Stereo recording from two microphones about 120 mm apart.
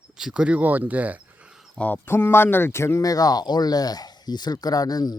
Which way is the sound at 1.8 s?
15° left (ahead or behind).